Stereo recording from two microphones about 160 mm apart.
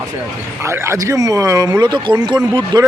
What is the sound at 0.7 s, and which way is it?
Speech, 15° right (ahead or behind).